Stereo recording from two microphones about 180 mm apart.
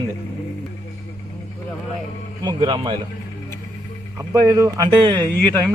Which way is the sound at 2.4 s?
25° right (ahead or behind).